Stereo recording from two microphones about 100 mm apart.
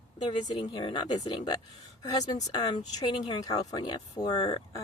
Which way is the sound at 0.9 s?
45° left (ahead or behind).